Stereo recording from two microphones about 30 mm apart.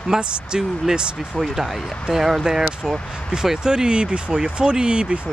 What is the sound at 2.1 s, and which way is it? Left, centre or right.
Speech, centre.